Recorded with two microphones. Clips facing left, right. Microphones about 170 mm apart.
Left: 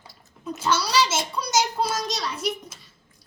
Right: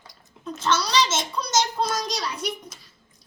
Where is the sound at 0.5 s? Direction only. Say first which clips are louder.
Even; 10° left (ahead or behind).